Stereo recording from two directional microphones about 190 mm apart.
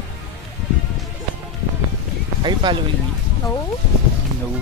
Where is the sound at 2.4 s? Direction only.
25° right (ahead or behind).